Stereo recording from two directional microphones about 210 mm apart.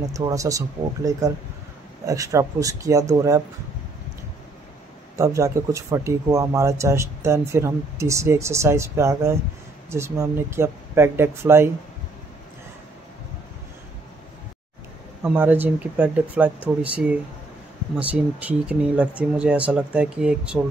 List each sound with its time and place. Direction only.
0.1 s speech: 15° right (ahead or behind)
5.1 s speech: 15° right (ahead or behind)
15.2 s speech: 10° right (ahead or behind)